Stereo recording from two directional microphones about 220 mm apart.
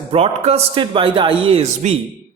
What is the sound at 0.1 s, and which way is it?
Speech, 25° right (ahead or behind).